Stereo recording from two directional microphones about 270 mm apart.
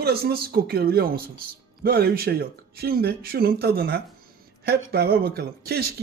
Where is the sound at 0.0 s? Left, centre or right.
Right.